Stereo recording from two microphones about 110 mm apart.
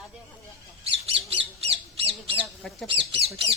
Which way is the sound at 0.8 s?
65° right (ahead or behind).